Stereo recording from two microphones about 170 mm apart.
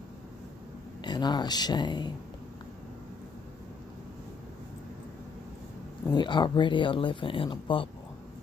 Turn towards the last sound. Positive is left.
turn(degrees=30)  # may be behind; listen again after turning